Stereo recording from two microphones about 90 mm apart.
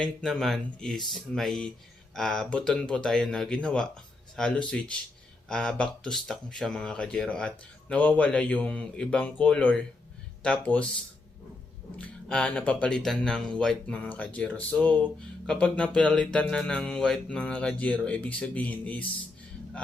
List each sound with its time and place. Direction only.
0.0 s speech: centre (ahead or behind)
11.9 s speech: 10° left (ahead or behind)